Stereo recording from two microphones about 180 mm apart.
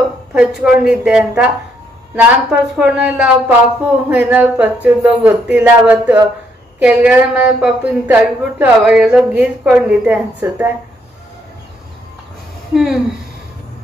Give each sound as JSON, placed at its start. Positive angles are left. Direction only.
{"t": 0.3, "sound": "a woman's voice", "side_deg": -5}
{"t": 12.7, "sound": "a woman's voice", "side_deg": 0}